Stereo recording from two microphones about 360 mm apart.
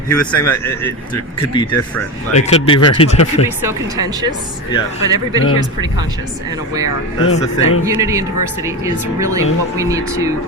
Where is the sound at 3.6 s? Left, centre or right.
Centre.